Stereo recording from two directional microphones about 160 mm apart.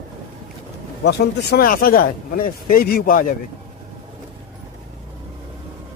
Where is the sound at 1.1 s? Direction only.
75° left (ahead or behind).